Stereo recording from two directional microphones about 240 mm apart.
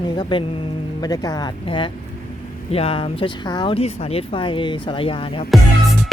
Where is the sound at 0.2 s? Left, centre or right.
Left.